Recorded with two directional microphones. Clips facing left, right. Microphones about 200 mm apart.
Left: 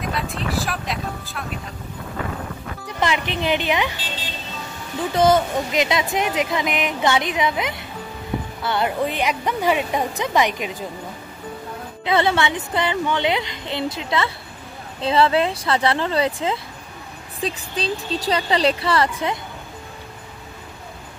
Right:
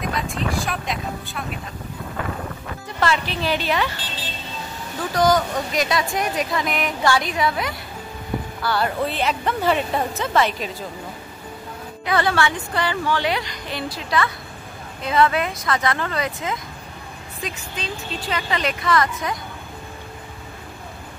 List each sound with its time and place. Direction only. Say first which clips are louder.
0.0 s vehicle: right 1 dB; centre (ahead or behind)
3.0 s speech: even; 20° left (ahead or behind)
5.1 s a woman's voice: left 2 dB; 25° left (ahead or behind)
12.0 s speech: left 1 dB; 25° left (ahead or behind)